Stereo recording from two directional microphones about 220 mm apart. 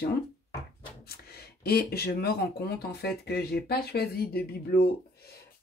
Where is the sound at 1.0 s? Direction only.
45° left (ahead or behind).